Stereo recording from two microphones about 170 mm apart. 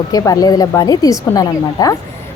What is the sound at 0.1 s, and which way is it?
Speech, 20° left (ahead or behind).